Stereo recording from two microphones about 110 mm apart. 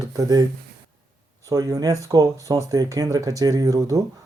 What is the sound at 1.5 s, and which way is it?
Speech, 30° right (ahead or behind).